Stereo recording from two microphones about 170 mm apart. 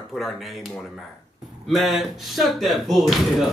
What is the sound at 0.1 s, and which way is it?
Speech, centre (ahead or behind).